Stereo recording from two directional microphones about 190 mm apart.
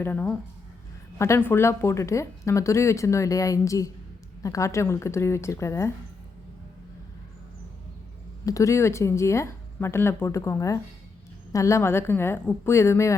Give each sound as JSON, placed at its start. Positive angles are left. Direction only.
{"t": 0.0, "sound": "speech", "side_deg": 10}
{"t": 8.4, "sound": "speech", "side_deg": 15}